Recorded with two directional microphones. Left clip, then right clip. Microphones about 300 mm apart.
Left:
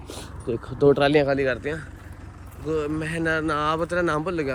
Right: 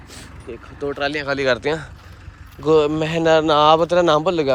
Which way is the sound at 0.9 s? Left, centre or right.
Centre.